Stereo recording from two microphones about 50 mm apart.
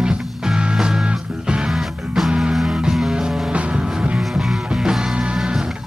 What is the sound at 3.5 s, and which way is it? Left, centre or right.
Music, right.